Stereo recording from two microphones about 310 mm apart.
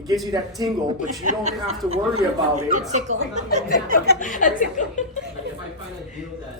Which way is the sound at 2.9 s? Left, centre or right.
Right.